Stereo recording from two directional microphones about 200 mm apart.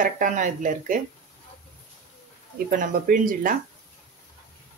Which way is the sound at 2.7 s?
45° right (ahead or behind).